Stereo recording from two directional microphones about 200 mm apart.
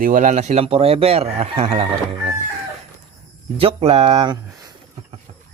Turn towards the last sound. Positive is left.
turn(degrees=-20)  # may be behind; listen again after turning